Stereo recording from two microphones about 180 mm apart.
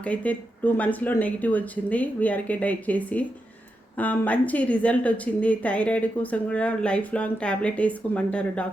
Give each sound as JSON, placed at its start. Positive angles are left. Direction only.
{"t": 0.0, "sound": "a woman's voice", "side_deg": 10}